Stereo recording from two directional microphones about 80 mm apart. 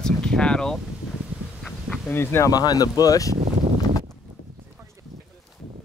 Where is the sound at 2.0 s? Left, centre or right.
Left.